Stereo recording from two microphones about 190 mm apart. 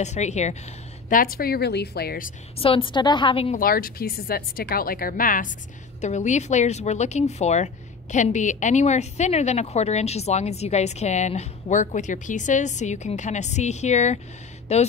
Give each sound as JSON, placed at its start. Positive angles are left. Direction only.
{"t": 0.0, "sound": "a woman's voice", "side_deg": 35}
{"t": 1.0, "sound": "speech", "side_deg": 50}
{"t": 2.6, "sound": "a woman's voice", "side_deg": 30}
{"t": 3.5, "sound": "a woman's voice", "side_deg": 50}